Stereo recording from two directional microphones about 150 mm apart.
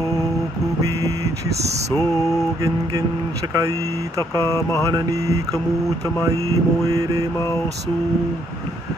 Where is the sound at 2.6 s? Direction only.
25° right (ahead or behind).